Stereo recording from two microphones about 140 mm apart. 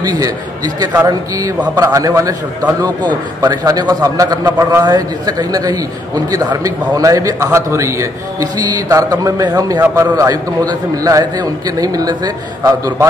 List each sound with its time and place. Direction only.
0.0 s a man's voice: 30° right (ahead or behind)